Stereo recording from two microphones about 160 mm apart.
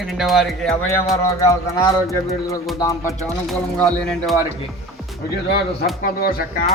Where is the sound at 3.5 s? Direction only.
Centre (ahead or behind).